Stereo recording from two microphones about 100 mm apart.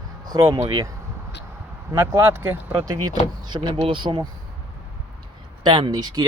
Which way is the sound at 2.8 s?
40° right (ahead or behind).